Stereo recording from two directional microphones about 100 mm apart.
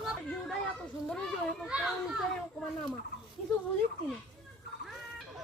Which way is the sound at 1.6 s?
10° right (ahead or behind).